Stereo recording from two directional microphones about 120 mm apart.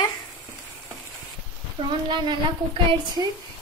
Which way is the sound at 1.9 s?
40° right (ahead or behind).